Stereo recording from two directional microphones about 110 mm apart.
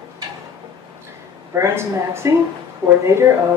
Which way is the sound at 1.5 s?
25° right (ahead or behind).